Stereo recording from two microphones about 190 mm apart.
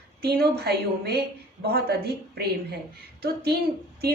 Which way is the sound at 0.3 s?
55° right (ahead or behind).